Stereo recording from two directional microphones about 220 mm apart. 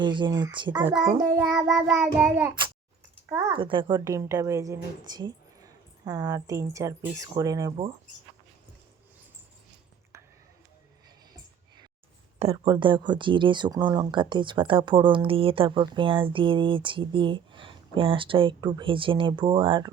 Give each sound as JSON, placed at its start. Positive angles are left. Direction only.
{"t": 0.0, "sound": "speech", "side_deg": -20}
{"t": 1.2, "sound": "child singing", "side_deg": -5}
{"t": 3.2, "sound": "speech", "side_deg": -20}
{"t": 12.4, "sound": "speech", "side_deg": -25}